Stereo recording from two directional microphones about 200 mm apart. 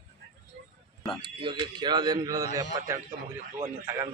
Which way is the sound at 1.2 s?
20° right (ahead or behind).